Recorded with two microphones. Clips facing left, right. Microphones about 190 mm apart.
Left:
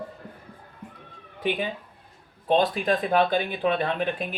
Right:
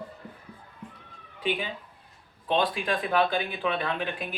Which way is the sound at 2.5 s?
45° left (ahead or behind).